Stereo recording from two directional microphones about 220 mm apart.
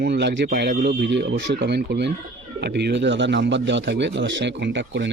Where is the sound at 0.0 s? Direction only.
50° right (ahead or behind).